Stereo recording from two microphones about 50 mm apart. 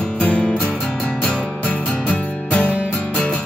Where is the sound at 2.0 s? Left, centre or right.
Left.